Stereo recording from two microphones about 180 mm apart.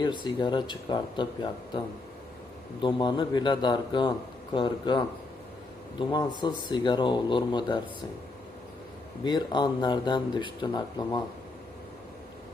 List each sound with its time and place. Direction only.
0.0 s speech: 25° left (ahead or behind)
2.8 s speech: 25° left (ahead or behind)
9.2 s speech: 25° left (ahead or behind)